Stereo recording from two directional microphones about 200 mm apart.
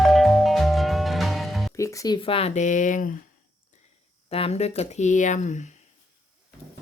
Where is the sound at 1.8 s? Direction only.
15° left (ahead or behind); by 3.0 s 40° left (ahead or behind).